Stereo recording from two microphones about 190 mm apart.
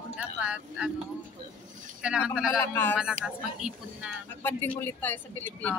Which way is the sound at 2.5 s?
10° left (ahead or behind).